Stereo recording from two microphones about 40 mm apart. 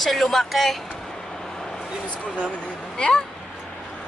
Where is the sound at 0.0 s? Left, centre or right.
Centre.